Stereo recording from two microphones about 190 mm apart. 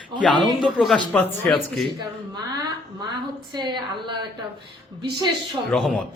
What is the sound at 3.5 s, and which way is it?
Speech, 25° right (ahead or behind).